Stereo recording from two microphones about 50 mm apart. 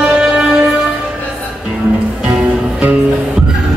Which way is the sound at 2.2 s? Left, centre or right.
Right.